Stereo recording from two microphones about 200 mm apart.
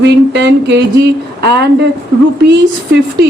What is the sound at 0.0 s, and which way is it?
Speech, 60° right (ahead or behind).